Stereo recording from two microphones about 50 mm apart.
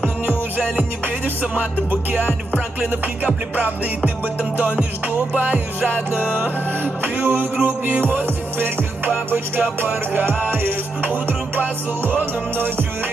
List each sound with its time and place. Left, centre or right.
0.0 s music: right
6.3 s music: right